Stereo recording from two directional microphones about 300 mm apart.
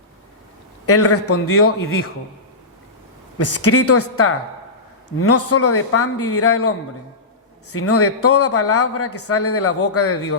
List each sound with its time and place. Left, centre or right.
0.9 s a man's voice: left
3.3 s a man's voice: left